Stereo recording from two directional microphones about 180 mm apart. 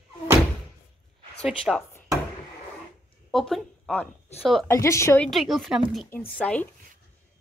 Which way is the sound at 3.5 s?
10° left (ahead or behind).